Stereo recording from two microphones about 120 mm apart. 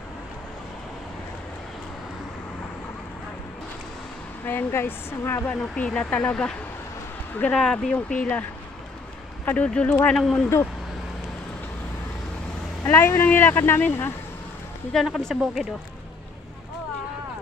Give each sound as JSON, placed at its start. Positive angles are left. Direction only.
{"t": 4.5, "sound": "speech", "side_deg": 15}
{"t": 5.8, "sound": "speech", "side_deg": 10}
{"t": 9.5, "sound": "speech", "side_deg": 10}
{"t": 12.8, "sound": "speech", "side_deg": 20}
{"t": 14.9, "sound": "speech", "side_deg": 0}